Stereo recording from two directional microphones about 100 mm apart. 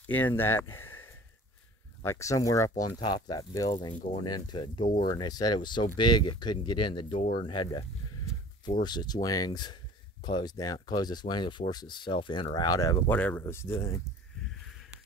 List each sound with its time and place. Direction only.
0.0 s speech: 20° left (ahead or behind); by 2.9 s 35° left (ahead or behind)
3.0 s speech: 45° left (ahead or behind)
12.5 s speech: 40° left (ahead or behind)
13.1 s speech: 20° left (ahead or behind)